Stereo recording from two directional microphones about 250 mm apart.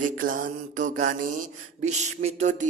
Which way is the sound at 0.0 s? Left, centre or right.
Right.